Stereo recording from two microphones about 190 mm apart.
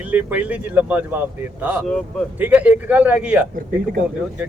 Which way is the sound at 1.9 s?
5° left (ahead or behind).